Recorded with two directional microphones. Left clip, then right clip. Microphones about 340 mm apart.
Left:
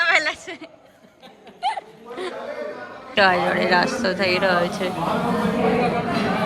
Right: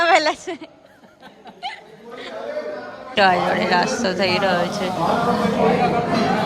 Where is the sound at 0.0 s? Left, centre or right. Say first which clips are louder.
Right 3 dB; centre.